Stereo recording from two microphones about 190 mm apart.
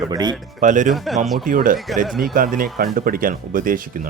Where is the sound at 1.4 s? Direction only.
45° right (ahead or behind).